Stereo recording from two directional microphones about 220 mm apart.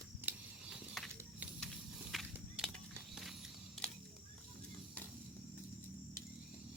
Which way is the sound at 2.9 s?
Centre (ahead or behind).